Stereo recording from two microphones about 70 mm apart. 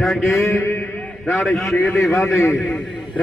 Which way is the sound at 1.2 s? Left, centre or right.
Centre.